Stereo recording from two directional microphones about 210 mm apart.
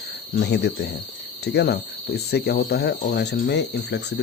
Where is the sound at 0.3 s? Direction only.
50° left (ahead or behind).